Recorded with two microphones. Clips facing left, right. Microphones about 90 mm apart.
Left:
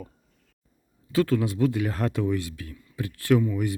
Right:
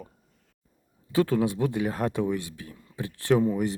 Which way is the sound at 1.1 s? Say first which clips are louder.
Even; 20° right (ahead or behind).